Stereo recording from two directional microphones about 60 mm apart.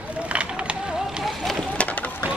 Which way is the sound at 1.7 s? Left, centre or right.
Left.